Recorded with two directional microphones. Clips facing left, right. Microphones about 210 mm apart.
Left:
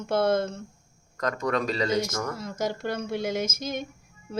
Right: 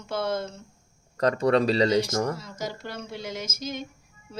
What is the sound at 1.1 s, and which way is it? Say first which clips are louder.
Speech: right 6 dB; 35° right (ahead or behind).